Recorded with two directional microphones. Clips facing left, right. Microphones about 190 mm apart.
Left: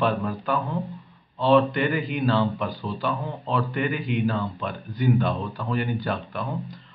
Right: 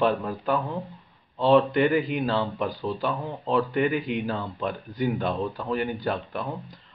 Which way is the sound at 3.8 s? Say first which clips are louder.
Right 1 dB; 30° right (ahead or behind).